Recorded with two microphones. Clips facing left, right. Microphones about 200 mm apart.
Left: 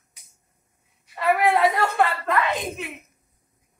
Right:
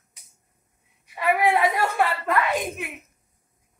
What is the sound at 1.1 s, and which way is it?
Speech, 15° right (ahead or behind).